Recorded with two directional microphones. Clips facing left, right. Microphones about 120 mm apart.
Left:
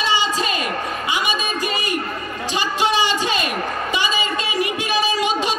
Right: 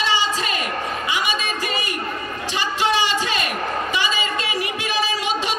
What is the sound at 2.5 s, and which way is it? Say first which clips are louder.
Music: left 1 dB; 15° left (ahead or behind).